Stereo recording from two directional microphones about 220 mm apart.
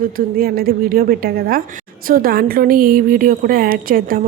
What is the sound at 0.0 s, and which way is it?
A woman's voice, 40° right (ahead or behind).